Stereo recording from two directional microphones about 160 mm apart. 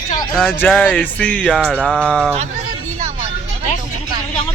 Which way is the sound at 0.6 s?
10° left (ahead or behind).